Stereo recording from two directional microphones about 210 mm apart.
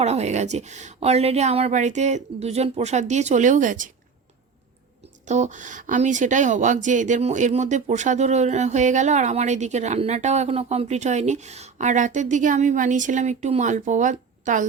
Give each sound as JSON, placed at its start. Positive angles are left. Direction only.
{"t": 0.0, "sound": "speech", "side_deg": -30}
{"t": 5.2, "sound": "speech", "side_deg": -35}